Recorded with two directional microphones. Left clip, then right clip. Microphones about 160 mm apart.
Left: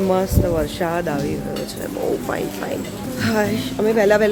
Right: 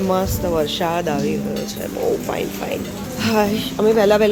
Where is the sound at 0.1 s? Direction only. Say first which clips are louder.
Right 2 dB; 10° left (ahead or behind).